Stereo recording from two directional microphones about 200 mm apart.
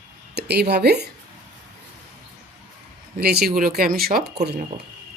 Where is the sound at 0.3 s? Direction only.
55° right (ahead or behind).